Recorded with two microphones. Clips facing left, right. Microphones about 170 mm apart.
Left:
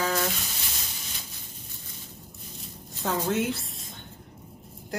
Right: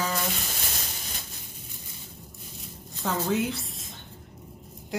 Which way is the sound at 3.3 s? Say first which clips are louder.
Even; centre (ahead or behind).